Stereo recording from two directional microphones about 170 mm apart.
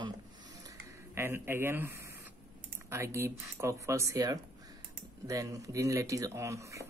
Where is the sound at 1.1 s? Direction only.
15° right (ahead or behind).